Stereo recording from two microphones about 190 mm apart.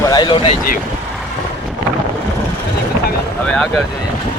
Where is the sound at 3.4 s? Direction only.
5° left (ahead or behind).